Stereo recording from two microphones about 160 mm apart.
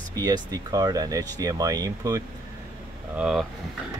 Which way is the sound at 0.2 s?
25° right (ahead or behind).